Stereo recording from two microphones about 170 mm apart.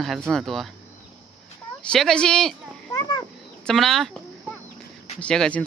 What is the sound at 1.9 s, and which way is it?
Speech, 5° left (ahead or behind).